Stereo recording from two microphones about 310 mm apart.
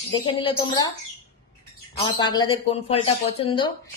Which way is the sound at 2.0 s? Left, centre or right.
Centre.